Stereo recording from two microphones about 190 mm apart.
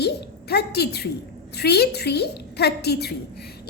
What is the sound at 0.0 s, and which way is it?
A woman's voice, 60° left (ahead or behind).